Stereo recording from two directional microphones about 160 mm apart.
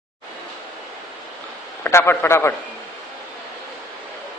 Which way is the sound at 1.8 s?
15° left (ahead or behind).